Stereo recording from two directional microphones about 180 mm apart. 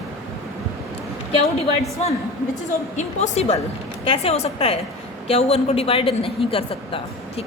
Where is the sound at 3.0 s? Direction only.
40° left (ahead or behind).